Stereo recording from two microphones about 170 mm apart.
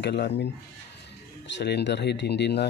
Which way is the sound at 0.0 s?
90° left.